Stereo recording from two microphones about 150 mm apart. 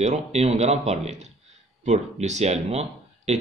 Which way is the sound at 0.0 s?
50° right (ahead or behind).